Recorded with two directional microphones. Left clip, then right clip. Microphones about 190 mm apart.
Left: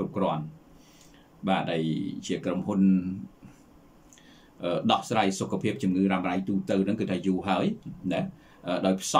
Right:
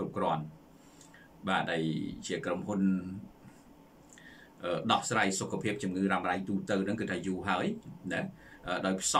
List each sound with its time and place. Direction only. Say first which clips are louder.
1.4 s speech: left 4 dB; 15° left (ahead or behind)
4.6 s speech: left 4 dB; 15° left (ahead or behind)